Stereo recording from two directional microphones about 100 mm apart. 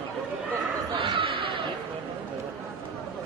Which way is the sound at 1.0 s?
60° right (ahead or behind).